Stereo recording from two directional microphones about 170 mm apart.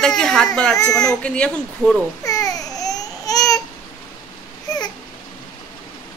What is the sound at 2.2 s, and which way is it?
Babbling, 20° left (ahead or behind).